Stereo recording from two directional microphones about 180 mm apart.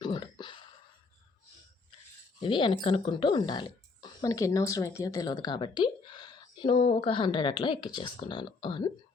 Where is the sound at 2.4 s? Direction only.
25° left (ahead or behind).